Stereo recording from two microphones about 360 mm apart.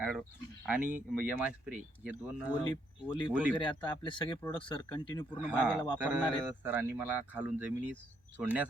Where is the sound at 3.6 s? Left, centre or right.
Centre.